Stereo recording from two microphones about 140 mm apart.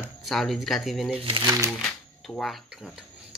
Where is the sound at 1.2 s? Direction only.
40° right (ahead or behind).